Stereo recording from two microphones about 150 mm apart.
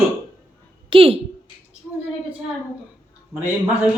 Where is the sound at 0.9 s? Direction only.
40° right (ahead or behind).